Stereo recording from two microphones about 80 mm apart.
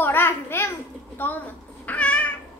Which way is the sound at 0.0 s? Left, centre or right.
Left.